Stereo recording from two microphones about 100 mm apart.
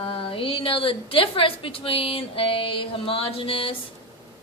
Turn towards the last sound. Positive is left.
turn(degrees=65)  # may be behind; listen again after turning